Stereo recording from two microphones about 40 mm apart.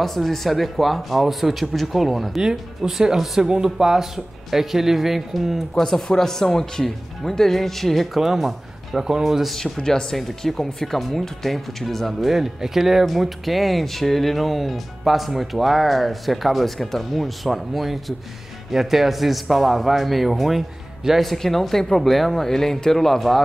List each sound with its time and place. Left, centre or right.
0.0 s speech: centre
2.5 s speech: centre
5.9 s speech: centre
9.6 s speech: centre
10.1 s speech: centre
21.2 s speech: centre